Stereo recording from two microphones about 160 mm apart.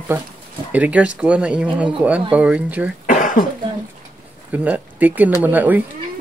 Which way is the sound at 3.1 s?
55° left (ahead or behind).